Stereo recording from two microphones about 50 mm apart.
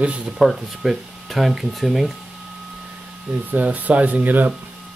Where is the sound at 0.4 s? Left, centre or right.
Centre.